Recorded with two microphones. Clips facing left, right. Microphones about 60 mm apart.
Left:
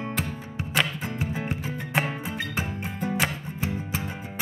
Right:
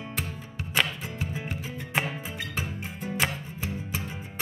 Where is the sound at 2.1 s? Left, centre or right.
Left.